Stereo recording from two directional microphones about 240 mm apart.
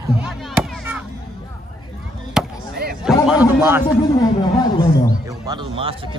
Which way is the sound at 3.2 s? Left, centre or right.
Centre.